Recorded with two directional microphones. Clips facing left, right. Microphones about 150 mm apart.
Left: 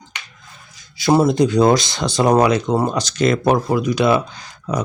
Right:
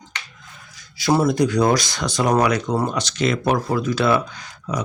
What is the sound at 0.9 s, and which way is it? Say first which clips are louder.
Speech: left 3 dB; 25° left (ahead or behind).